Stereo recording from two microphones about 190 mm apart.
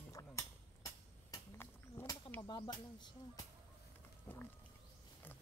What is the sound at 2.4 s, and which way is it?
Speech, 25° left (ahead or behind).